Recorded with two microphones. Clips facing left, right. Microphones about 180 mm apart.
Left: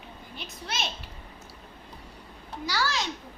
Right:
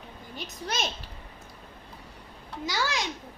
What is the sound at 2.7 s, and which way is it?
Speech, 20° right (ahead or behind).